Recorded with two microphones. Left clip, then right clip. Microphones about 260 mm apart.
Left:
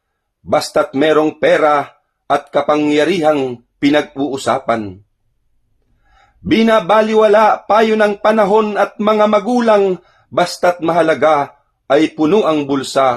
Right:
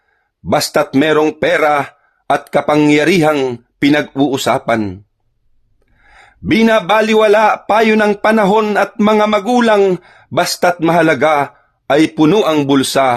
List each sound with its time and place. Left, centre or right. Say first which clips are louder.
0.4 s a man's voice: right 1 dB; right
6.1 s a man's voice: right 1 dB; right